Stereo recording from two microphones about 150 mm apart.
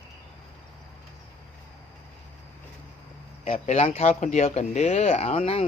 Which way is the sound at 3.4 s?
45° left (ahead or behind).